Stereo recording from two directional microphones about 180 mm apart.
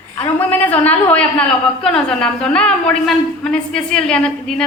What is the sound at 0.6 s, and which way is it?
A woman's voice, 10° left (ahead or behind).